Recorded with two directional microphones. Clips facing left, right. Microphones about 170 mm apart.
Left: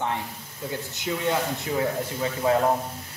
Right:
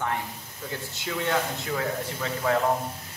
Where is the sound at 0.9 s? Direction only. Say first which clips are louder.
Left 1 dB; 20° left (ahead or behind).